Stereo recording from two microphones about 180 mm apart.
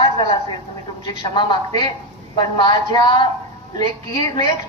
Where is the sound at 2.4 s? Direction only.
25° left (ahead or behind).